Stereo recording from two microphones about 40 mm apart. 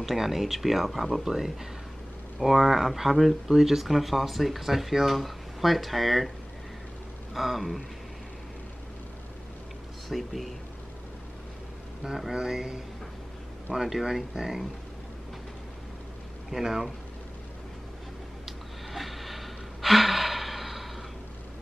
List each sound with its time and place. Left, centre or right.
0.0 s speech: centre
7.3 s speech: centre
10.0 s speech: centre
12.3 s speech: centre
13.7 s speech: centre
16.4 s speech: centre
18.4 s gasp: centre